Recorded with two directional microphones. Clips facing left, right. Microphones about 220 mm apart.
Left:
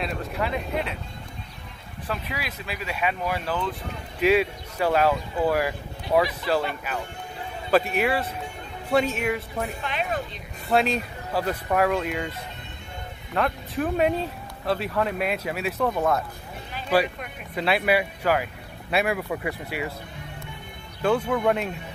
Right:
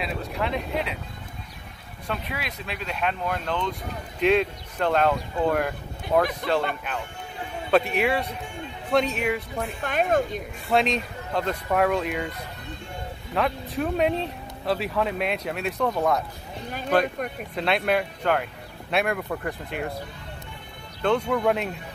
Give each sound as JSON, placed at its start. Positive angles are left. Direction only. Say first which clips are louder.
{"t": 0.0, "sound": "speech", "louder": "even", "side_deg": 0}
{"t": 2.0, "sound": "speech", "louder": "even", "side_deg": 0}
{"t": 9.8, "sound": "speech", "louder": "right 6 dB", "side_deg": -45}
{"t": 10.7, "sound": "speech", "louder": "even", "side_deg": 5}
{"t": 13.3, "sound": "speech", "louder": "even", "side_deg": 0}
{"t": 17.6, "sound": "speech", "louder": "left 1 dB", "side_deg": 5}
{"t": 21.0, "sound": "speech", "louder": "even", "side_deg": 5}